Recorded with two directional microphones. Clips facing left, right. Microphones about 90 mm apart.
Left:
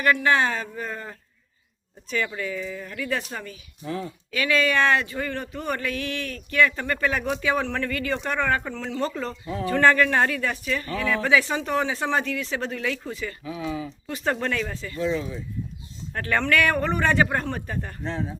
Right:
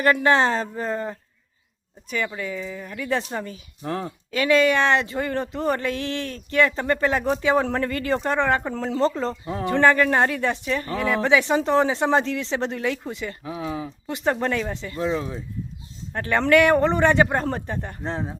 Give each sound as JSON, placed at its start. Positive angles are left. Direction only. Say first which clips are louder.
{"t": 0.0, "sound": "speech", "louder": "right 3 dB", "side_deg": -35}
{"t": 2.0, "sound": "speech", "louder": "even", "side_deg": -15}
{"t": 3.8, "sound": "speech", "louder": "right 3 dB", "side_deg": -60}
{"t": 4.3, "sound": "speech", "louder": "right 5 dB", "side_deg": -25}
{"t": 13.4, "sound": "speech", "louder": "even", "side_deg": -35}
{"t": 14.1, "sound": "speech", "louder": "right 3 dB", "side_deg": -20}
{"t": 14.9, "sound": "speech", "louder": "even", "side_deg": -40}
{"t": 16.1, "sound": "speech", "louder": "right 5 dB", "side_deg": -20}
{"t": 18.1, "sound": "speech", "louder": "right 1 dB", "side_deg": -35}